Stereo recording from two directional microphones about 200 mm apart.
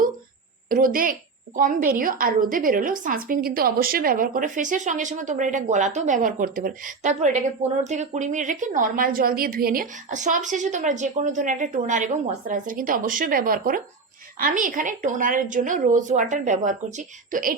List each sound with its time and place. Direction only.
0.7 s a woman's voice: 45° right (ahead or behind)